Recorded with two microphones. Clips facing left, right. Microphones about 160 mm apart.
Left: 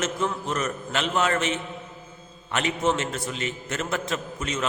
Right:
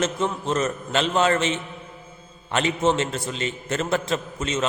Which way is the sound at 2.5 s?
30° right (ahead or behind).